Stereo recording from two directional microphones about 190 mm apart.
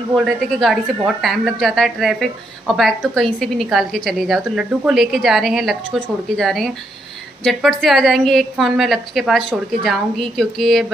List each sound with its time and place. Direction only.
0.1 s a woman's voice: centre (ahead or behind)